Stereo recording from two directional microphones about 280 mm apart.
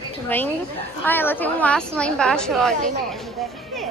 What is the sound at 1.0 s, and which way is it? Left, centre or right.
A woman's voice, centre.